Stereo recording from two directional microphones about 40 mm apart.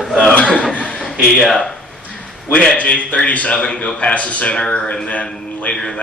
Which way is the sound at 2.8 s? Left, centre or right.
Left.